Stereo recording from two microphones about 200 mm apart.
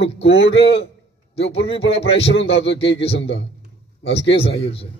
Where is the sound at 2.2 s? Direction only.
65° left (ahead or behind).